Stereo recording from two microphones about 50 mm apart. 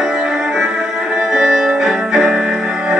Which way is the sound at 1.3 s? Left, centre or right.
Centre.